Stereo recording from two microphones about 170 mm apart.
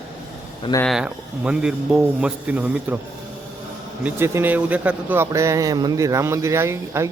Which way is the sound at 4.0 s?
10° right (ahead or behind).